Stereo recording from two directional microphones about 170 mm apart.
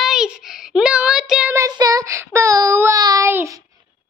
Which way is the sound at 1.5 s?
20° right (ahead or behind).